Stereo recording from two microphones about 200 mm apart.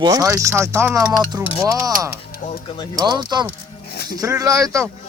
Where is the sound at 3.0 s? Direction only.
20° right (ahead or behind).